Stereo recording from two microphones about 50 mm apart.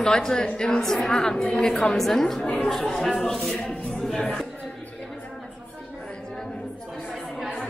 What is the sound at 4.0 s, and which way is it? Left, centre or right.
Music, centre.